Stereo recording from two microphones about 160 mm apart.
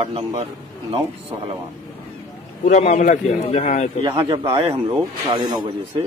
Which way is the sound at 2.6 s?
55° left (ahead or behind).